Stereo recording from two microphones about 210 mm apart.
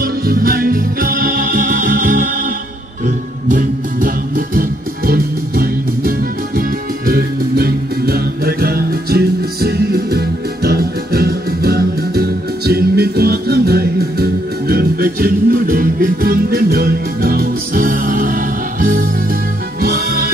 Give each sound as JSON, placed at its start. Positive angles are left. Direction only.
{"t": 0.0, "sound": "music", "side_deg": -45}
{"t": 3.4, "sound": "music", "side_deg": -40}